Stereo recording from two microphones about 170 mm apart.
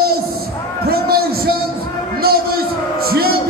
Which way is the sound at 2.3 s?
65° right (ahead or behind).